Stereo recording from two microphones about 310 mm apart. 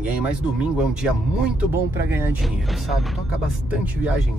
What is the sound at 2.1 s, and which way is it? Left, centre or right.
Speech, centre.